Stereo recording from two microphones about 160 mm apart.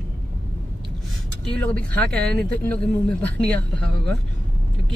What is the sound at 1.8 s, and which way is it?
Speech, 5° left (ahead or behind).